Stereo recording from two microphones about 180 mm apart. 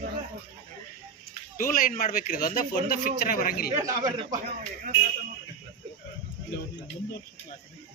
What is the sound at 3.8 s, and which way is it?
Speech, 20° right (ahead or behind).